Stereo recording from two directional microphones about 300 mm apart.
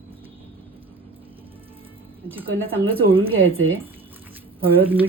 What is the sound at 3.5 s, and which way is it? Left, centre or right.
Speech, right.